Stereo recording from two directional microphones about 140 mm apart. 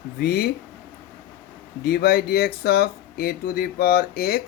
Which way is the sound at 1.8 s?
90° left.